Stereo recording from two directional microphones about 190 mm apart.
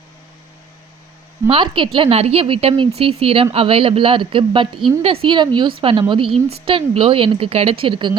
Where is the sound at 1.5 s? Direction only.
25° right (ahead or behind).